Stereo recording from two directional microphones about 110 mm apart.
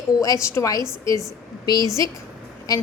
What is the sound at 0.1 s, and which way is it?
Speech, 35° left (ahead or behind).